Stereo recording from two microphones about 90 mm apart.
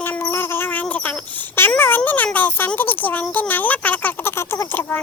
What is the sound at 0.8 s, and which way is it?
Wail, 15° left (ahead or behind).